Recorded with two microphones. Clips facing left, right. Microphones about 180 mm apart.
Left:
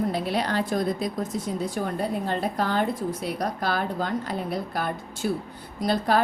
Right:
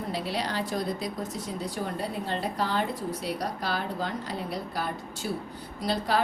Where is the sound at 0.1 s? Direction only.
55° left (ahead or behind).